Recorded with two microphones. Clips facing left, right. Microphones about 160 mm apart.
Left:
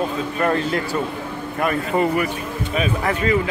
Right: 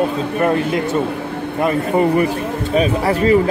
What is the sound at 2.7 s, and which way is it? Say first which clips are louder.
Speech: right 6 dB; 35° right (ahead or behind).